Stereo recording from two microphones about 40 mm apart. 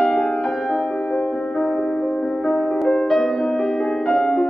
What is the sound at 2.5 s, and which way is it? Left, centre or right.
Music, centre.